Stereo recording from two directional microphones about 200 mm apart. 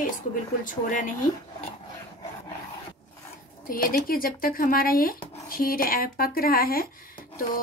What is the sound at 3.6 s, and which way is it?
A woman's voice, 45° left (ahead or behind).